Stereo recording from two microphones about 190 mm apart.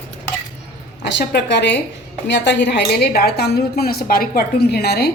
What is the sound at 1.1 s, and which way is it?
A woman's voice, 65° left (ahead or behind).